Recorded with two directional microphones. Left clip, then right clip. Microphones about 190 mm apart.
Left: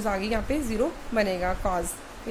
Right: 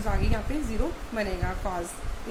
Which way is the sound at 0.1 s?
50° left (ahead or behind).